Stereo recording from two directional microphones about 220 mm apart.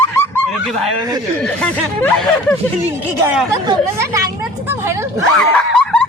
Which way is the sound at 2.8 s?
5° right (ahead or behind).